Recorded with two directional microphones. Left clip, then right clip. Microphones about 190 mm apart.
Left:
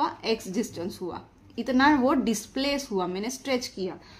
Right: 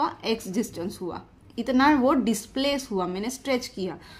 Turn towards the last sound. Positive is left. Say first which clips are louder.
# right 1 dB
turn(degrees=-20)  # may be behind; listen again after turning